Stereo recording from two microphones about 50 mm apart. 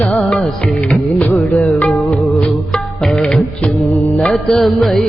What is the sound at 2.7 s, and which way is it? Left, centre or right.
Music, centre.